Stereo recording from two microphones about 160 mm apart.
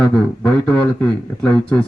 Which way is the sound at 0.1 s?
10° left (ahead or behind).